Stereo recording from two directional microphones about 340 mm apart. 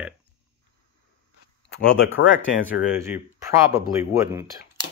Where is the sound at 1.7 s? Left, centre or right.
Left.